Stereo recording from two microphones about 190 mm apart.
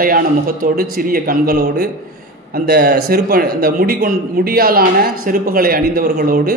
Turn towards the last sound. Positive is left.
turn(degrees=-50)  # may be behind; listen again after turning